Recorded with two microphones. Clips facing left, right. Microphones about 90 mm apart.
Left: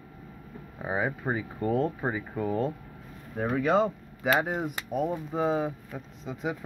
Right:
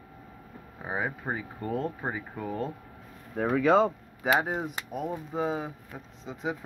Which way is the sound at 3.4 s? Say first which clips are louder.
Right 2 dB; 90° right.